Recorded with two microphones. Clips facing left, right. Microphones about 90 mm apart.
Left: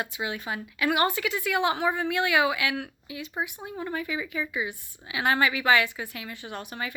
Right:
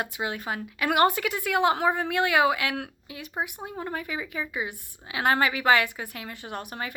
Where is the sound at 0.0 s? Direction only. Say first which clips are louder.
Right 1 dB; 50° right (ahead or behind).